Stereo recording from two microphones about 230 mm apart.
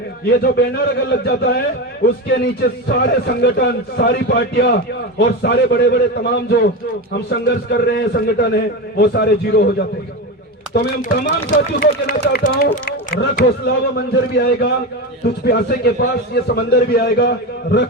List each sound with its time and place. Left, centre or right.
0.3 s a man's voice: left